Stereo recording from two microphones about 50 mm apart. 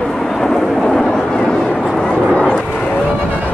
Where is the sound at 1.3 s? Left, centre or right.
Centre.